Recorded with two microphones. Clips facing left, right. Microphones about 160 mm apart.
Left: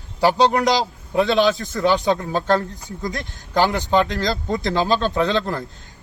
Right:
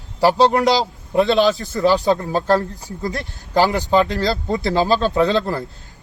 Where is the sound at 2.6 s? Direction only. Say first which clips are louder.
Right 2 dB; 35° right (ahead or behind).